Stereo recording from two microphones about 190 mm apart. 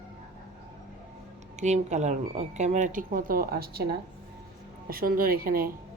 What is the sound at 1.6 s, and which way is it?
Speech, 35° right (ahead or behind).